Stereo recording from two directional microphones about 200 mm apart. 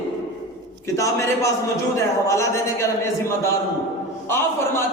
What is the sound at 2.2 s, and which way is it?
Speech, 15° left (ahead or behind).